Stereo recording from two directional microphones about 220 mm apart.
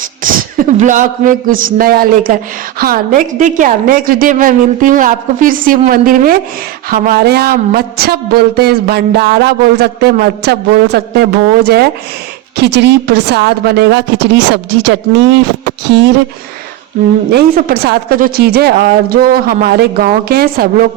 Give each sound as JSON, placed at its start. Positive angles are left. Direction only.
{"t": 0.2, "sound": "a man's voice", "side_deg": -40}
{"t": 17.3, "sound": "speech", "side_deg": -45}